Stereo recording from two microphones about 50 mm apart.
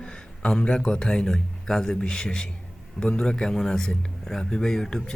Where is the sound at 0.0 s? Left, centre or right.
Left.